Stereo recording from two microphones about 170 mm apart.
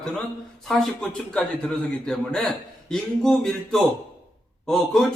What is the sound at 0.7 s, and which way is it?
A man's voice, 5° left (ahead or behind).